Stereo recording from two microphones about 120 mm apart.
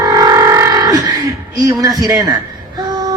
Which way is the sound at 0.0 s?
30° right (ahead or behind).